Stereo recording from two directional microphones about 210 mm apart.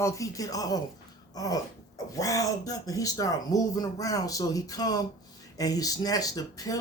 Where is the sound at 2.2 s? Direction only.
15° left (ahead or behind).